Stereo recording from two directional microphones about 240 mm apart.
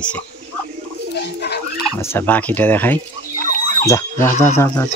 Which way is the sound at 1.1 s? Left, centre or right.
Left.